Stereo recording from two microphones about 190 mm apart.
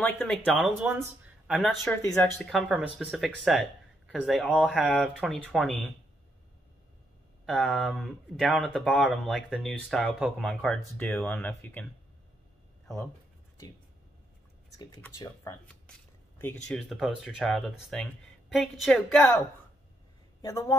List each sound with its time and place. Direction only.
0.0 s speech: 10° left (ahead or behind); by 1.0 s 10° right (ahead or behind)
1.6 s speech: 5° left (ahead or behind)
7.4 s speech: centre (ahead or behind)
15.1 s speech: 15° left (ahead or behind)